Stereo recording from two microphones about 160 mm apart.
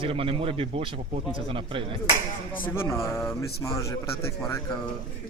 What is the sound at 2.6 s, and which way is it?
A man's voice, 15° left (ahead or behind).